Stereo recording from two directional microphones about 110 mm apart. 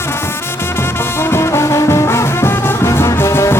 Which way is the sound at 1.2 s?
25° left (ahead or behind).